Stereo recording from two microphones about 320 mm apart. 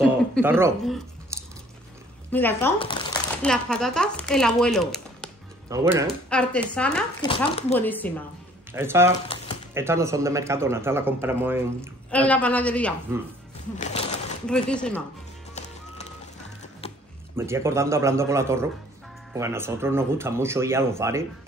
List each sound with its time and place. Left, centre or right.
0.3 s a man's voice: centre
1.3 s chewing: centre
2.3 s speech: centre
3.4 s speech: centre
5.7 s a man's voice: centre
6.3 s speech: centre
7.2 s speech: centre
8.7 s a man's voice: centre
12.1 s speech: centre
13.7 s speech: left
14.4 s speech: centre
16.8 s music: centre
17.4 s a man's voice: centre